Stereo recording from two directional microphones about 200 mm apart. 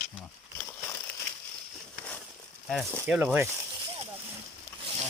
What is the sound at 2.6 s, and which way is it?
Speech, 5° right (ahead or behind).